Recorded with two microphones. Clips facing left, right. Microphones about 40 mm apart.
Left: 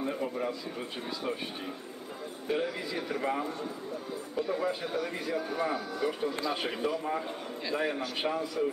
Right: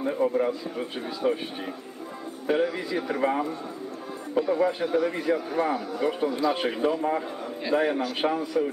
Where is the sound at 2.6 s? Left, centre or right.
Centre.